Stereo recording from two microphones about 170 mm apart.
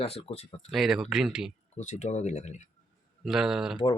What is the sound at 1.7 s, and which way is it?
Speech, 45° left (ahead or behind).